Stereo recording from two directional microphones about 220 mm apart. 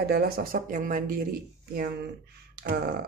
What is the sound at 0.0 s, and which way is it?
Speech, 45° right (ahead or behind).